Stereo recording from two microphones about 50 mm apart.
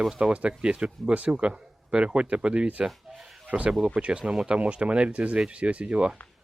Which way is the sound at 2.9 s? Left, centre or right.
Centre.